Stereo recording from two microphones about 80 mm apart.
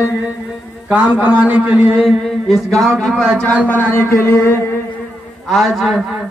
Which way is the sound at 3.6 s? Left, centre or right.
Left.